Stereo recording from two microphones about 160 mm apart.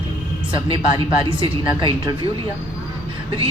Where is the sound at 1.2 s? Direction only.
30° right (ahead or behind).